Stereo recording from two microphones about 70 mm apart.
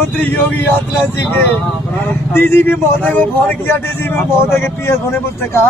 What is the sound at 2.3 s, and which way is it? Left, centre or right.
A man's voice, left.